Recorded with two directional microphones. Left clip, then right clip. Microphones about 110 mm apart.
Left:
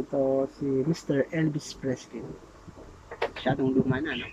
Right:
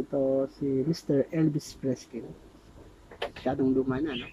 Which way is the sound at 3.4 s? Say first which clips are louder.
Even; 20° right (ahead or behind).